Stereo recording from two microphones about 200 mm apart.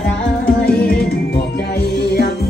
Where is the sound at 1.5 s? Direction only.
55° left (ahead or behind).